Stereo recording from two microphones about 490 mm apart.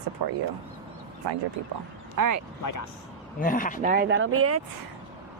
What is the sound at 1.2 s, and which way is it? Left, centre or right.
Speech, right.